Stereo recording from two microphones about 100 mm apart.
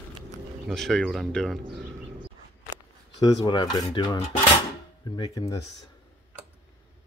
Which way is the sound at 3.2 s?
45° left (ahead or behind).